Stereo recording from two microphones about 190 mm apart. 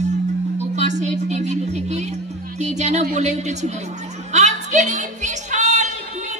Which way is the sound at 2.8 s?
35° right (ahead or behind).